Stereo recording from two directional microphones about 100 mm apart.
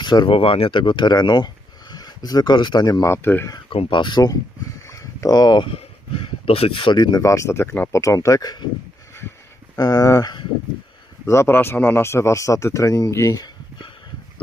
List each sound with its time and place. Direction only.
0.0 s speech: 45° left (ahead or behind)
0.3 s speech: 65° left (ahead or behind); by 3.4 s 20° left (ahead or behind)
3.8 s speech: 50° left (ahead or behind)
4.9 s a sound: 35° left (ahead or behind)
5.6 s speech: 65° left (ahead or behind)
6.9 s speech: 40° left (ahead or behind); by 8.0 s 20° left (ahead or behind)
8.0 s speech: 30° left (ahead or behind)
9.7 s speech: 40° left (ahead or behind)